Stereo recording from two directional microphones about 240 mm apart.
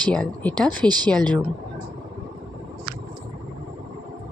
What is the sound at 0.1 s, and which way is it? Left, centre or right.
Speech, centre.